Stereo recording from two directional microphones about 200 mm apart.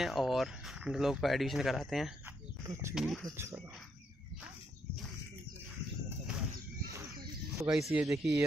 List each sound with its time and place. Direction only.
0.0 s speech: centre (ahead or behind)
2.6 s speech: 15° right (ahead or behind)
2.9 s speech: centre (ahead or behind)
3.3 s speech: 15° right (ahead or behind)
7.5 s speech: 5° right (ahead or behind)